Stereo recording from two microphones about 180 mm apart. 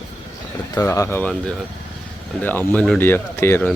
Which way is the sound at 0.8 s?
15° left (ahead or behind).